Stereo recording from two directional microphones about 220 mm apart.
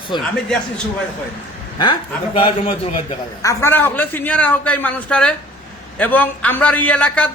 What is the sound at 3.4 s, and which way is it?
A man's voice, 15° left (ahead or behind).